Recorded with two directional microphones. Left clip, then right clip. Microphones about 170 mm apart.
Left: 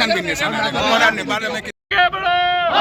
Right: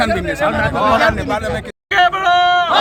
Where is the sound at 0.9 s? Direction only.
40° right (ahead or behind).